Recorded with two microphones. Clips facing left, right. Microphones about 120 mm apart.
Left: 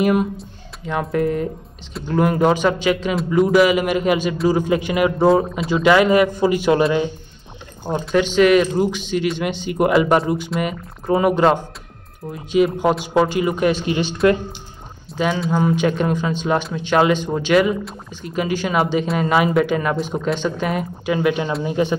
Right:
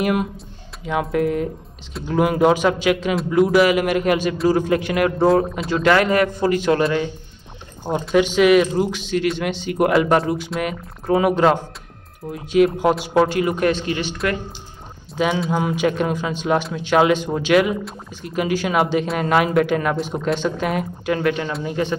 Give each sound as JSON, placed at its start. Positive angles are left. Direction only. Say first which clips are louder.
{"t": 0.0, "sound": "speech", "louder": "left 3 dB", "side_deg": 0}
{"t": 7.9, "sound": "speech", "louder": "right 1 dB", "side_deg": -5}
{"t": 13.8, "sound": "speech", "louder": "left 3 dB", "side_deg": 20}
{"t": 15.1, "sound": "speech", "louder": "left 1 dB", "side_deg": -5}